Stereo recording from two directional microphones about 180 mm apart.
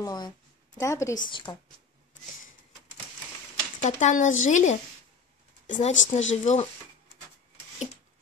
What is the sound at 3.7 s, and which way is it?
Speech, 40° left (ahead or behind).